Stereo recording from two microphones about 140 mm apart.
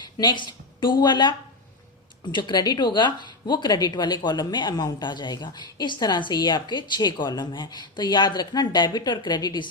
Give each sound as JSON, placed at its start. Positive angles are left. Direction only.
{"t": 0.2, "sound": "speech", "side_deg": 35}